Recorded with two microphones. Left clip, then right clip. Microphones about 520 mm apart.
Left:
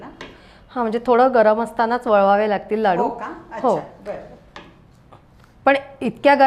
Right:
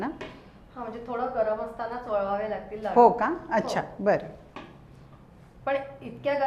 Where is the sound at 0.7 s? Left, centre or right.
Left.